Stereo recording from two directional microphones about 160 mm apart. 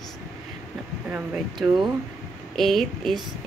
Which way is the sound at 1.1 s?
5° right (ahead or behind).